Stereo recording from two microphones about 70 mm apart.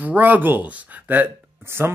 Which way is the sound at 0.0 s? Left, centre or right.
Right.